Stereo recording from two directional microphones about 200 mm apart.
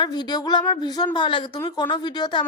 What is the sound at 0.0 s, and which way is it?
A woman's voice, 20° left (ahead or behind).